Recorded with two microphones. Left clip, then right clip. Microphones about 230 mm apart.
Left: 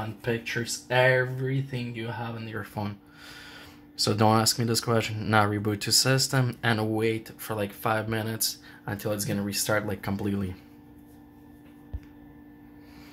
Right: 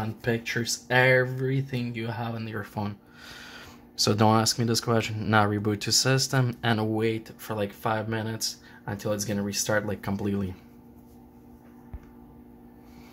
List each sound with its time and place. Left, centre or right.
0.5 s speech: centre
2.5 s speech: centre